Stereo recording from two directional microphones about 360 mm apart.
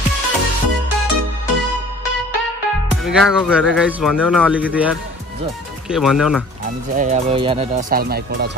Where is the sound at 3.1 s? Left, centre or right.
Centre.